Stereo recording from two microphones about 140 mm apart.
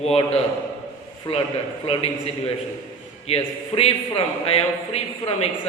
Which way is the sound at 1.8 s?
45° left (ahead or behind).